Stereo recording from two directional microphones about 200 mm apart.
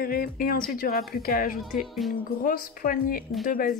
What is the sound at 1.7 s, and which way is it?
Music, centre (ahead or behind).